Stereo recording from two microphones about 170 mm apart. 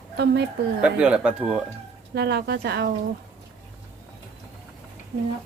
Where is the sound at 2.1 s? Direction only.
75° right (ahead or behind).